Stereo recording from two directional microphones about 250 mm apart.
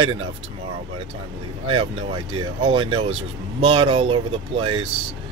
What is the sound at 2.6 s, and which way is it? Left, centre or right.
Speech, right.